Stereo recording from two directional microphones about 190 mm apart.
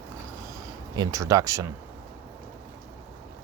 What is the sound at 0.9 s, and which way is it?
Speech, 15° right (ahead or behind).